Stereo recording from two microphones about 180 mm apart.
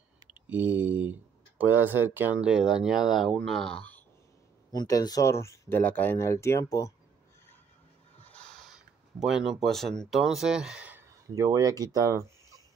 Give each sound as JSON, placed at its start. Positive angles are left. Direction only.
{"t": 0.3, "sound": "speech", "side_deg": -10}
{"t": 4.7, "sound": "speech", "side_deg": 20}
{"t": 8.2, "sound": "speech", "side_deg": 5}